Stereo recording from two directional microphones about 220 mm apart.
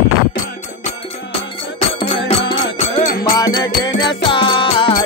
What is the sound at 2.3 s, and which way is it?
Music, 25° left (ahead or behind).